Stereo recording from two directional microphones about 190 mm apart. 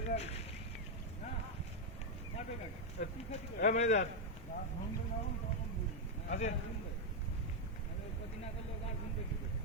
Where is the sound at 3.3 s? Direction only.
35° left (ahead or behind).